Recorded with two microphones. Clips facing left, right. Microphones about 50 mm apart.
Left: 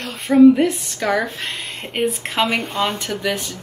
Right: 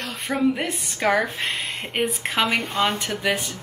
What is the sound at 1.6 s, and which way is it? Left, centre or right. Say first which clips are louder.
A woman's voice: left 7 dB; centre.